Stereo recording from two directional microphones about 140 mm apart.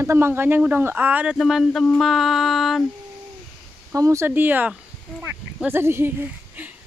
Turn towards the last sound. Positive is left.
turn(degrees=-15)  # may be behind; listen again after turning